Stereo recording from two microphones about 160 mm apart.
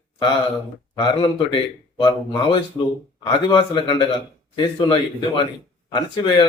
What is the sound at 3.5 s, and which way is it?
Speech, 30° left (ahead or behind).